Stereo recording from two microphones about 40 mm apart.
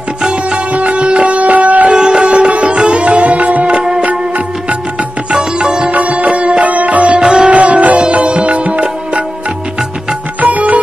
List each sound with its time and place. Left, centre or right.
0.2 s music: centre
0.7 s music: right
1.9 s sitar: right
3.7 s music: centre
5.3 s sitar: right
5.9 s music: right
7.2 s sitar: centre
7.4 s music: right
10.4 s music: right